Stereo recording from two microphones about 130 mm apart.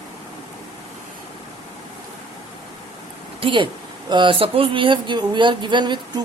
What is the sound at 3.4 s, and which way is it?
Speech, 40° right (ahead or behind).